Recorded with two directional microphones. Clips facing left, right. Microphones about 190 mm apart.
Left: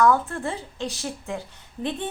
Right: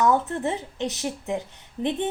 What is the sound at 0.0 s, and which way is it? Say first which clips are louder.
Speech: left 1 dB; 20° right (ahead or behind).